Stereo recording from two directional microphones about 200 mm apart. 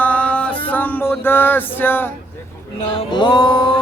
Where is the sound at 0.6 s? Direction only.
10° left (ahead or behind).